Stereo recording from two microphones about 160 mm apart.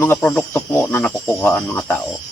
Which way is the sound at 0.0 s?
10° left (ahead or behind).